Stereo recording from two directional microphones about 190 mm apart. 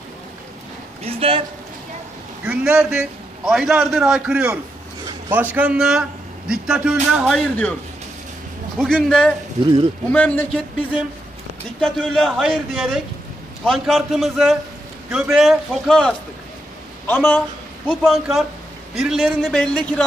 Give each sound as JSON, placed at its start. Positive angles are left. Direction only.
{"t": 1.0, "sound": "speech", "side_deg": -30}
{"t": 2.4, "sound": "a man's voice", "side_deg": -5}
{"t": 8.7, "sound": "a man's voice", "side_deg": 5}
{"t": 11.8, "sound": "a man's voice", "side_deg": 5}